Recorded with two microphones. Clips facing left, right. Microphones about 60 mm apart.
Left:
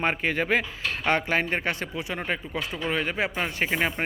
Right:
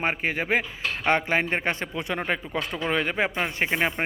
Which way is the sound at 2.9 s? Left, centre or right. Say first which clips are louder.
Right 2 dB; right.